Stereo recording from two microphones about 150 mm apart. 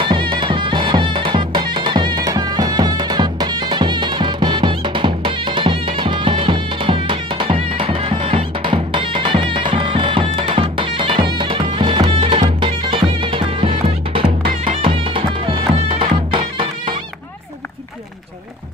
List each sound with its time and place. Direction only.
0.0 s music: 35° right (ahead or behind)